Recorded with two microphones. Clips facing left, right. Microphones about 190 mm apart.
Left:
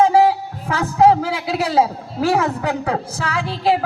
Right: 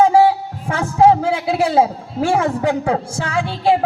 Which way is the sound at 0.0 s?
30° right (ahead or behind).